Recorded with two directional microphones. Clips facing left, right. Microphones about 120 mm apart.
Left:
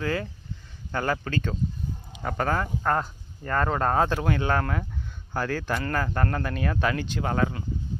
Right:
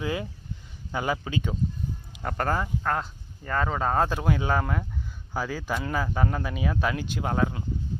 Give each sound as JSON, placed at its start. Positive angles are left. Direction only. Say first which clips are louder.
{"t": 0.0, "sound": "speech", "louder": "left 1 dB", "side_deg": -15}